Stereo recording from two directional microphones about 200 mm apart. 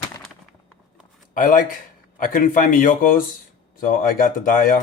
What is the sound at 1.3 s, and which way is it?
Speech, 40° left (ahead or behind).